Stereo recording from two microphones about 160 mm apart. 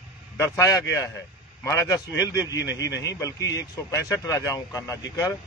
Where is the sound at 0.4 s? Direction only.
20° left (ahead or behind).